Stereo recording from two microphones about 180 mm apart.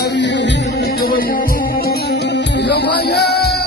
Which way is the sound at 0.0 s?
75° left (ahead or behind).